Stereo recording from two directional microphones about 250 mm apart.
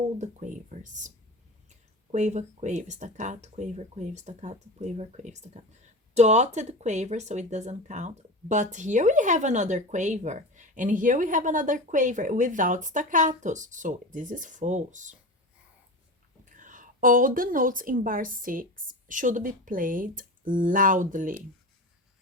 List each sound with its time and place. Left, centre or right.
0.2 s speech: right
2.1 s speech: right
16.5 s a woman's voice: right